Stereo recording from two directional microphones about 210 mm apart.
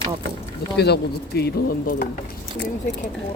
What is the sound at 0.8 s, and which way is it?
Speech, 50° left (ahead or behind).